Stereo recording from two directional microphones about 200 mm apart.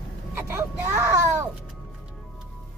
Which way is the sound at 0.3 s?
15° right (ahead or behind).